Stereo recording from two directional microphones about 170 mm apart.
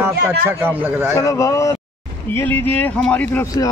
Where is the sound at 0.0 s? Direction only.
15° right (ahead or behind).